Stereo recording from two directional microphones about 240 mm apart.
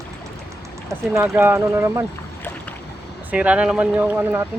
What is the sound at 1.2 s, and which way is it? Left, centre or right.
Speech, centre.